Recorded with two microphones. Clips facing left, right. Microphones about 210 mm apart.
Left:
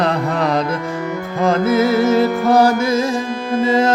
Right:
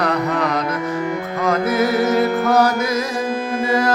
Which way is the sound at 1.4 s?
25° left (ahead or behind).